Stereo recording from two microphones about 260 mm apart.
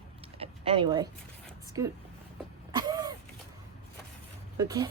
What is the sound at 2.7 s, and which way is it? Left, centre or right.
Vehicle, centre.